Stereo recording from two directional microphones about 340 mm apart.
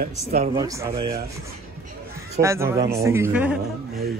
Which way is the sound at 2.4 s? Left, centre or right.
Centre.